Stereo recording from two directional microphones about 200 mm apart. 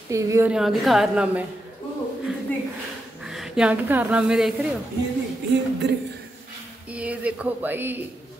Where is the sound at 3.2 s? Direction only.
Centre (ahead or behind).